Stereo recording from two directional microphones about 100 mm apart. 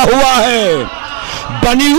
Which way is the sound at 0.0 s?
15° right (ahead or behind).